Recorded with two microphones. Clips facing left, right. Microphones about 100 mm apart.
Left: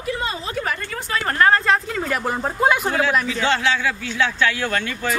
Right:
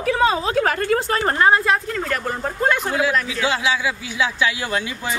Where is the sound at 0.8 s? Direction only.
45° right (ahead or behind).